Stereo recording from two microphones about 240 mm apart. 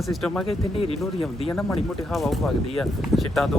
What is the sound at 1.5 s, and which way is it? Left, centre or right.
Speech, centre.